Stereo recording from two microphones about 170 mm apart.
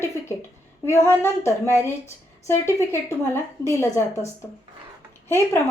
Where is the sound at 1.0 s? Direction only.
15° left (ahead or behind).